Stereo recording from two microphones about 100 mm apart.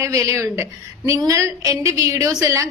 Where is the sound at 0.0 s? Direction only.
30° right (ahead or behind).